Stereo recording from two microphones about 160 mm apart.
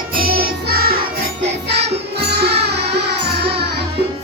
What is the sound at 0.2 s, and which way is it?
Music, 70° right (ahead or behind).